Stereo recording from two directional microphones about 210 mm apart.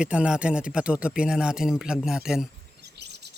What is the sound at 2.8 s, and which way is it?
Chirp, 50° right (ahead or behind).